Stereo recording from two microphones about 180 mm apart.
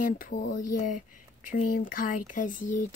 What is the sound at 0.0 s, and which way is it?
Speech, 50° left (ahead or behind).